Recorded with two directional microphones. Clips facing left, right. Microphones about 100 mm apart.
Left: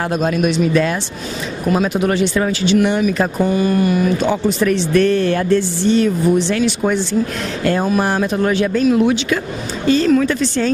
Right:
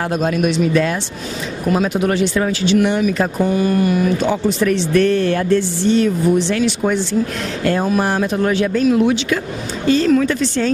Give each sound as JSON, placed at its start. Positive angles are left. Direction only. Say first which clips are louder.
{"t": 0.0, "sound": "speech", "louder": "left 1 dB", "side_deg": 25}